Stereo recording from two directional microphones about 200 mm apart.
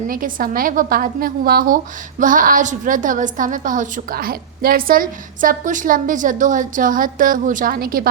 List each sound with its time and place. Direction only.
0.1 s a woman's voice: 45° right (ahead or behind)